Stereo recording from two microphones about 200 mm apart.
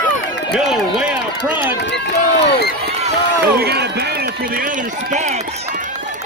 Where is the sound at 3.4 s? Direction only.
55° right (ahead or behind).